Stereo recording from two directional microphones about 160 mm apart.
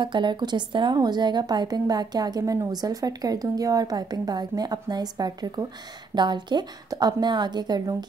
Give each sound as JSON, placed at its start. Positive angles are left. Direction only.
{"t": 0.0, "sound": "a woman's voice", "side_deg": -30}